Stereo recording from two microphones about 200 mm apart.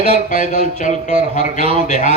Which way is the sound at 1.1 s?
40° left (ahead or behind).